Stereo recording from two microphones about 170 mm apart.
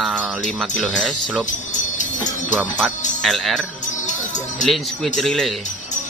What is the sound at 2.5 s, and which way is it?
Speech, centre (ahead or behind).